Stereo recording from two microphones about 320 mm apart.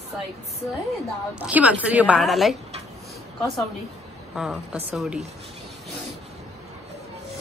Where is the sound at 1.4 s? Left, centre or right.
Centre.